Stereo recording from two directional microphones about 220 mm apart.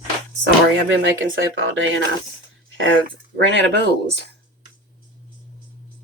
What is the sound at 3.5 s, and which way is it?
Speech, 55° right (ahead or behind).